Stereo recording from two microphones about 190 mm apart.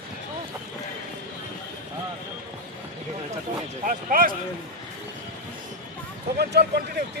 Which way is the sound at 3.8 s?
50° right (ahead or behind).